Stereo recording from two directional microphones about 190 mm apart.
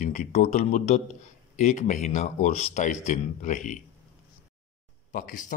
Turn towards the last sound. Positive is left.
turn(degrees=40)  # may be behind; listen again after turning